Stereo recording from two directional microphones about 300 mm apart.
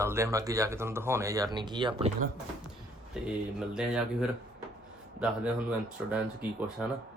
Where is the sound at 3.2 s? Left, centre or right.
Centre.